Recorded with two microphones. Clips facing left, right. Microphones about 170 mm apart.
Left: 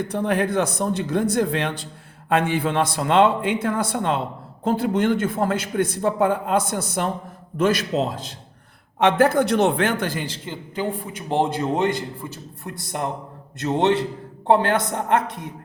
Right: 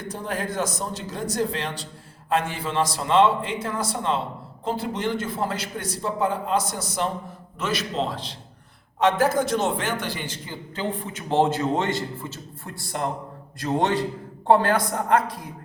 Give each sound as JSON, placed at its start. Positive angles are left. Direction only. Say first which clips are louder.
{"t": 0.1, "sound": "a man's voice", "louder": "left 6 dB", "side_deg": 65}
{"t": 9.0, "sound": "a man's voice", "louder": "left 3 dB", "side_deg": 60}
{"t": 10.5, "sound": "a man's voice", "louder": "left 3 dB", "side_deg": 10}